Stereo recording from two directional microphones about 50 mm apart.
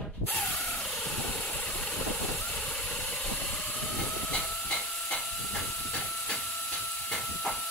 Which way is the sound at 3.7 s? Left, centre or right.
Centre.